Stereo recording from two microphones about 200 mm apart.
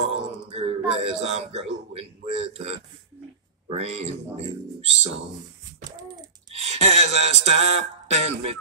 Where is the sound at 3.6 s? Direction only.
30° right (ahead or behind).